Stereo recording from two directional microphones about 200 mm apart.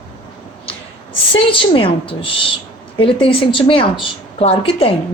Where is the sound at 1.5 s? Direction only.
25° left (ahead or behind).